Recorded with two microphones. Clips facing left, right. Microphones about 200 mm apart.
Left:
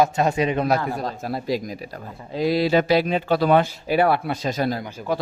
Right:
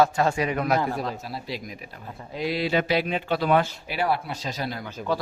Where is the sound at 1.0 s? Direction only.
45° left (ahead or behind).